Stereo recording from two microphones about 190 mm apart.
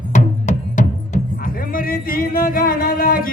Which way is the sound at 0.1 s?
40° left (ahead or behind).